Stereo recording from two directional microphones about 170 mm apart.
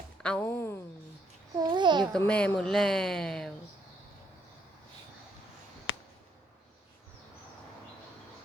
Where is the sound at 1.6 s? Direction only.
25° right (ahead or behind).